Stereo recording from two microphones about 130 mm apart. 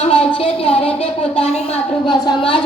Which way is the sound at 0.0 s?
45° left (ahead or behind).